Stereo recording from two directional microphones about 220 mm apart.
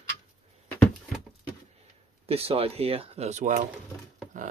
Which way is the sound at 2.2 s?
25° right (ahead or behind).